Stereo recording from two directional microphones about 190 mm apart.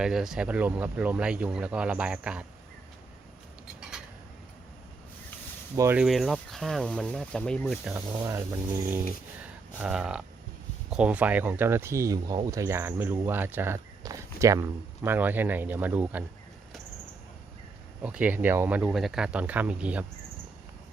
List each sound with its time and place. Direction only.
0.0 s speech: centre (ahead or behind)
3.8 s a sound: 5° right (ahead or behind)
5.7 s speech: 15° right (ahead or behind)
6.0 s speech: centre (ahead or behind)
7.9 s speech: 15° right (ahead or behind)
18.0 s speech: 5° right (ahead or behind)